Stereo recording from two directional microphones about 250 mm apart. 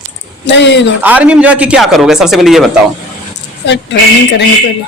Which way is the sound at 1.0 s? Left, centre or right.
Centre.